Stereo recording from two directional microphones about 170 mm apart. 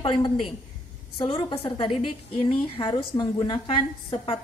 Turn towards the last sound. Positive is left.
turn(degrees=35)  # may be behind; listen again after turning